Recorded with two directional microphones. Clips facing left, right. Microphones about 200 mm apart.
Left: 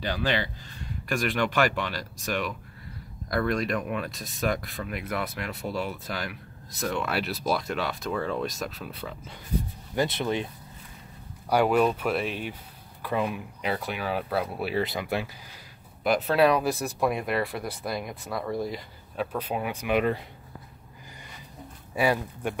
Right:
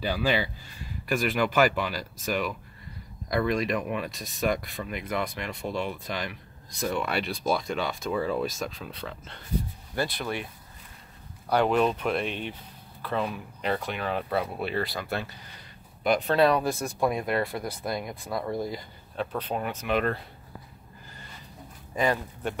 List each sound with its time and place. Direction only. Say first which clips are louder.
0.0 s speech: right 1 dB; 10° right (ahead or behind); by 9.4 s 10° left (ahead or behind)
9.9 s speech: left 4 dB; 20° left (ahead or behind)
11.4 s speech: left 1 dB; 10° left (ahead or behind)
14.8 s speech: left 6 dB; 20° left (ahead or behind)
21.9 s speech: left 1 dB; 10° left (ahead or behind)